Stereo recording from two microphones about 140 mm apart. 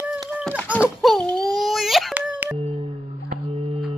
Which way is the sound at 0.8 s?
Centre (ahead or behind).